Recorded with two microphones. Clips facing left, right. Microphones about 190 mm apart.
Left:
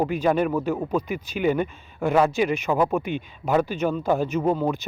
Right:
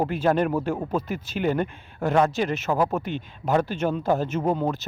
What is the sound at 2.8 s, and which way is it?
Speech, centre (ahead or behind).